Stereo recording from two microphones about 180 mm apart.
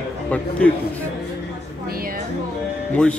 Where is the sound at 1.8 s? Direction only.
55° right (ahead or behind).